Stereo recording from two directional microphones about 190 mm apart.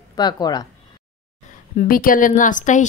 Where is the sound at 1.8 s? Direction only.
45° left (ahead or behind).